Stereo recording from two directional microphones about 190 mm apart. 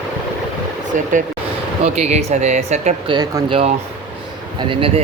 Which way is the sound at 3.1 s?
25° right (ahead or behind).